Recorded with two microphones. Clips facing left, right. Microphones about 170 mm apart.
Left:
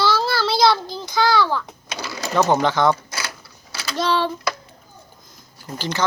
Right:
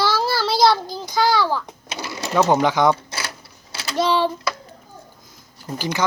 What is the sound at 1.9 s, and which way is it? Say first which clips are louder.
Sewing machine: even; 25° right (ahead or behind).